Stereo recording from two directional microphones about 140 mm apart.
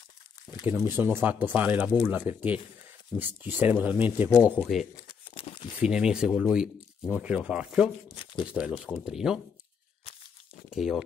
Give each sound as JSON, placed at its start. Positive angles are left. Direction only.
{"t": 0.7, "sound": "speech", "side_deg": -15}
{"t": 5.0, "sound": "crumpling", "side_deg": 40}
{"t": 5.8, "sound": "speech", "side_deg": -5}
{"t": 10.7, "sound": "speech", "side_deg": -5}